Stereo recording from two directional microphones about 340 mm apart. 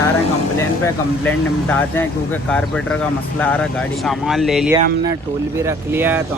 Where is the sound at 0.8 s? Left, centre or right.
Centre.